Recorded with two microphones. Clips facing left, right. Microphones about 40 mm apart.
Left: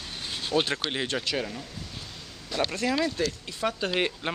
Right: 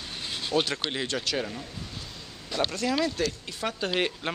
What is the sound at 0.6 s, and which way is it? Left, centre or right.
Speech, left.